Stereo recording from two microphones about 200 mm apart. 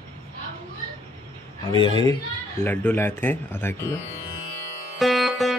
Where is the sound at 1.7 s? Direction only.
25° left (ahead or behind).